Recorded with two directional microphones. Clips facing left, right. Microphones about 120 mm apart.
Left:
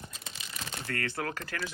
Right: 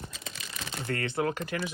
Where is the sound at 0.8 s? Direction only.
25° right (ahead or behind).